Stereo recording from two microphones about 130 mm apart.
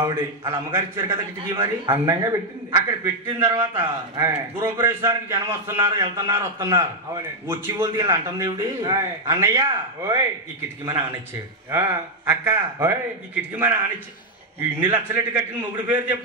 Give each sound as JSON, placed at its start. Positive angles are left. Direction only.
{"t": 0.5, "sound": "a man's voice", "side_deg": -20}
{"t": 5.9, "sound": "a man's voice", "side_deg": -35}
{"t": 7.4, "sound": "a man's voice", "side_deg": -25}
{"t": 11.7, "sound": "a man's voice", "side_deg": -20}
{"t": 14.8, "sound": "a man's voice", "side_deg": -15}